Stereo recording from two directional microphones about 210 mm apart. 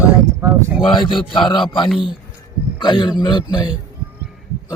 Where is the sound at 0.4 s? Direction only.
10° right (ahead or behind).